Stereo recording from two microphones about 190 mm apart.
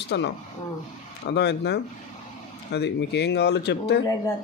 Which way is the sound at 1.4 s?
65° left (ahead or behind).